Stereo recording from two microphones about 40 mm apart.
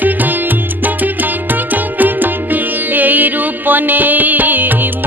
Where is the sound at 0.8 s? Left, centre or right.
Right.